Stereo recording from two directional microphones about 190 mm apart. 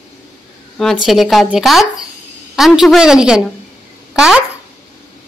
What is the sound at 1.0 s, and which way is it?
Speech, centre (ahead or behind).